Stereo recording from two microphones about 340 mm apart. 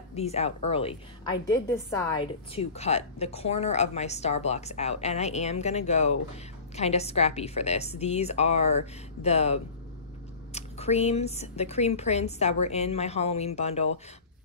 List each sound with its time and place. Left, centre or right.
0.1 s a woman's voice: centre